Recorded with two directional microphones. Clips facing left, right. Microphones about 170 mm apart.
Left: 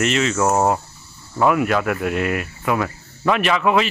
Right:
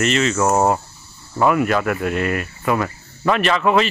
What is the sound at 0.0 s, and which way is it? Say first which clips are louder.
Speech: right 1 dB; 5° left (ahead or behind).